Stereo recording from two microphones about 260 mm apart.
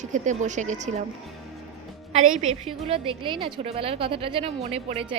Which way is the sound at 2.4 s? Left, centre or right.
Right.